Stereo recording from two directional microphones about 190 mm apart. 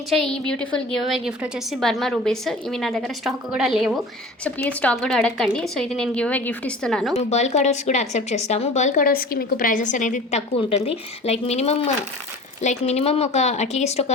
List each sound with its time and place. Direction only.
0.1 s a woman's voice: 5° left (ahead or behind)
7.2 s a woman's voice: 35° left (ahead or behind)